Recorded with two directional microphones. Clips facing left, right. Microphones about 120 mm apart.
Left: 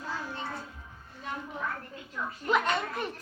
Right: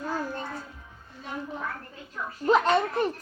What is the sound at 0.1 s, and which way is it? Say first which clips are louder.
Music: right 4 dB; 45° right (ahead or behind).